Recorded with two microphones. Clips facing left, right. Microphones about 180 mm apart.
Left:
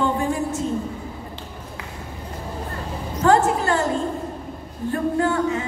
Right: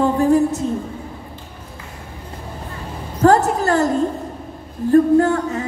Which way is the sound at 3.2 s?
40° right (ahead or behind).